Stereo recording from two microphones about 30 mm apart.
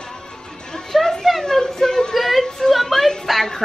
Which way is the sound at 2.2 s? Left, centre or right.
Centre.